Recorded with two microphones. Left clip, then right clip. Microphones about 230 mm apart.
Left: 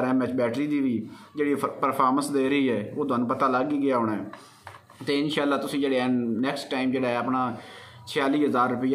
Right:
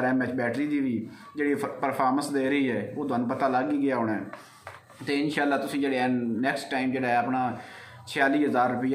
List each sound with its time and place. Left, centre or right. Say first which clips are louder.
0.0 s a man's voice: left 2 dB; centre